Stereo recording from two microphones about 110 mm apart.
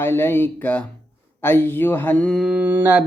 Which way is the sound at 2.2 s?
Centre (ahead or behind).